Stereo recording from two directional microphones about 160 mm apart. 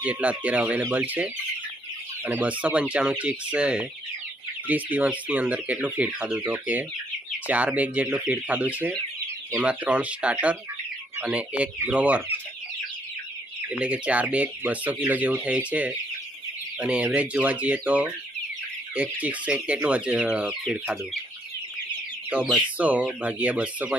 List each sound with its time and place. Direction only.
0.0 s speech: 10° right (ahead or behind)
13.7 s speech: 10° right (ahead or behind)
19.2 s speech: 10° right (ahead or behind)
22.3 s speech: 10° right (ahead or behind)